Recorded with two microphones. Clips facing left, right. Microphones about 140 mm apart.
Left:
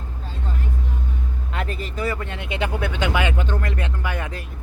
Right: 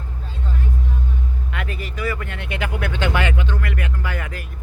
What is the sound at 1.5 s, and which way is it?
Speech, 35° left (ahead or behind).